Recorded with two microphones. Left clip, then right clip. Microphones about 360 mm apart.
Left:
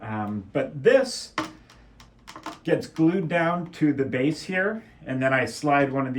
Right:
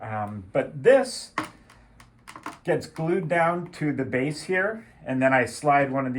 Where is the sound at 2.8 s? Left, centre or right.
Centre.